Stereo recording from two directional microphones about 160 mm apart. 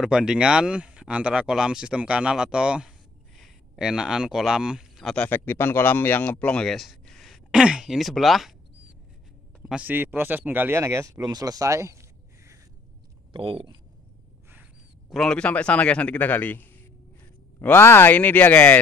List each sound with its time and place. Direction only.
0.0 s speech: 5° right (ahead or behind)
9.7 s speech: 10° right (ahead or behind)
13.3 s speech: 35° right (ahead or behind)
14.5 s a sound: 10° right (ahead or behind)
15.1 s a man's voice: 5° left (ahead or behind)